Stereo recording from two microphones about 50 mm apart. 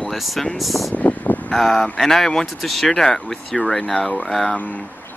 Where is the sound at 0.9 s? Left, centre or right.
Left.